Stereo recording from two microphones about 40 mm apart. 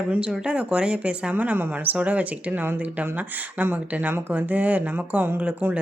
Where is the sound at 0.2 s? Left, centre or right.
Right.